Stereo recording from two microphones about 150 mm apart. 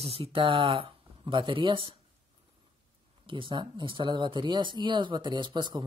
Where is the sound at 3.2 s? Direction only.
35° right (ahead or behind).